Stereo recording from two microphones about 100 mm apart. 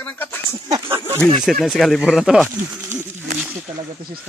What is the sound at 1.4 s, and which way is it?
Speech, centre (ahead or behind).